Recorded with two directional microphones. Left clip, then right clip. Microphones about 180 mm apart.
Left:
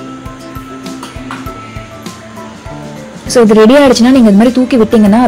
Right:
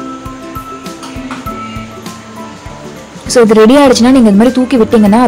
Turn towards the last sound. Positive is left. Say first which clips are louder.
# even
turn(degrees=0)  # may be behind; listen again after turning